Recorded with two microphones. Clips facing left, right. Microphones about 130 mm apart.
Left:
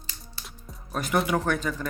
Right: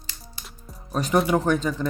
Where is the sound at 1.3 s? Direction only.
20° right (ahead or behind).